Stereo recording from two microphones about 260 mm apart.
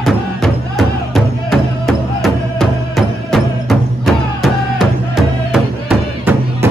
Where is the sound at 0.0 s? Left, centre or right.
Centre.